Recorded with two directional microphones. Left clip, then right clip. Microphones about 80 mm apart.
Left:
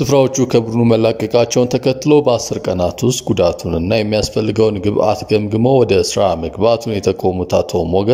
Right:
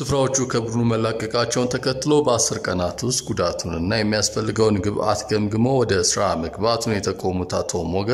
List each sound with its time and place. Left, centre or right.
0.0 s speech: left
0.4 s a man's voice: left
2.0 s speech: left